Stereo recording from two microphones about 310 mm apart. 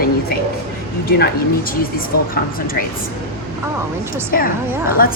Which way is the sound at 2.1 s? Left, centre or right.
Left.